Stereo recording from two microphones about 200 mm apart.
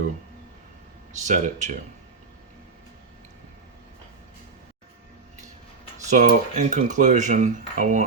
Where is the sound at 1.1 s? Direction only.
35° right (ahead or behind).